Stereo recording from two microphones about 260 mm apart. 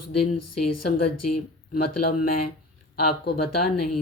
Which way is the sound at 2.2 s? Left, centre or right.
Left.